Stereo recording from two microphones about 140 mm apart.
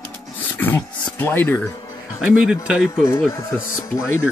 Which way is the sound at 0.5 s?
15° left (ahead or behind).